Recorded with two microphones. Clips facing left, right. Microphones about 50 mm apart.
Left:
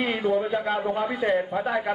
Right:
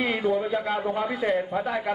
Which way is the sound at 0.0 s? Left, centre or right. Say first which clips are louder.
Left 1 dB; centre.